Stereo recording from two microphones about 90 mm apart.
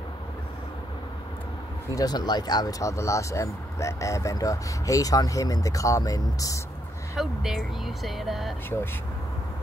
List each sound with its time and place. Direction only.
2.0 s speech: 50° left (ahead or behind)
7.2 s speech: centre (ahead or behind)